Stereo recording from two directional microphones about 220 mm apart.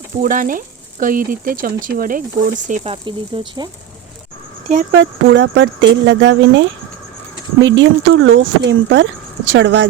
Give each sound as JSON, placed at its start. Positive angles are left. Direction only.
{"t": 0.2, "sound": "speech", "side_deg": -40}
{"t": 4.7, "sound": "speech", "side_deg": -35}
{"t": 4.9, "sound": "speech", "side_deg": -55}
{"t": 7.8, "sound": "a woman's voice", "side_deg": -60}